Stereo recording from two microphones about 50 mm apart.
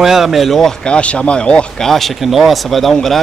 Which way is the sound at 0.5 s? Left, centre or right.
Centre.